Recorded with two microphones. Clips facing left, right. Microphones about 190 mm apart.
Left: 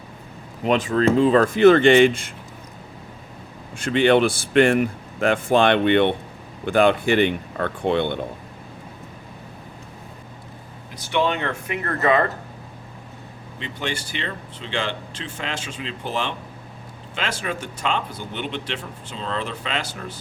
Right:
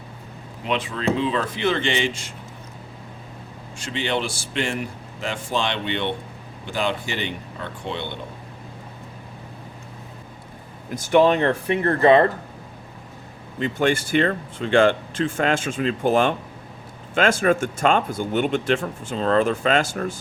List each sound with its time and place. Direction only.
0.6 s speech: 45° left (ahead or behind)
3.8 s speech: 55° left (ahead or behind)
10.9 s speech: 45° right (ahead or behind); by 12.3 s 30° right (ahead or behind)
13.6 s speech: 50° right (ahead or behind)